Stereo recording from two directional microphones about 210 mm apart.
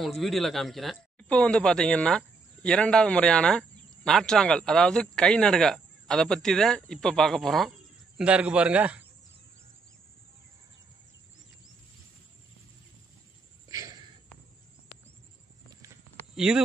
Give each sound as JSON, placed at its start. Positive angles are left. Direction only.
{"t": 0.0, "sound": "speech", "side_deg": 0}
{"t": 13.7, "sound": "a sound", "side_deg": -15}
{"t": 16.3, "sound": "speech", "side_deg": -5}